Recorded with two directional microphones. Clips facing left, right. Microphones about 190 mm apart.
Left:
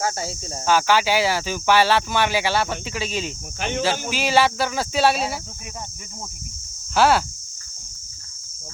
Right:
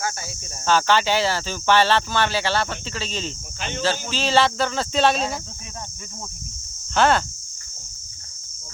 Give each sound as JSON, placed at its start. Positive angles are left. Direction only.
{"t": 0.0, "sound": "speech", "side_deg": 30}
{"t": 0.6, "sound": "speech", "side_deg": 10}
{"t": 6.9, "sound": "speech", "side_deg": 5}